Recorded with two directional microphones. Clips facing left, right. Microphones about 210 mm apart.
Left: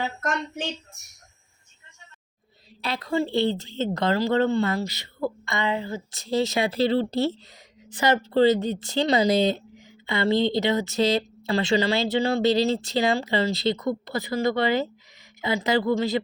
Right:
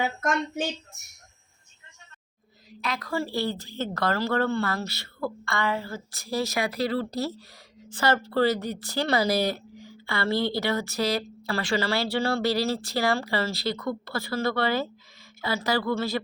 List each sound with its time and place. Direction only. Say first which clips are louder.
2.8 s a woman's voice: left 4 dB; 30° left (ahead or behind)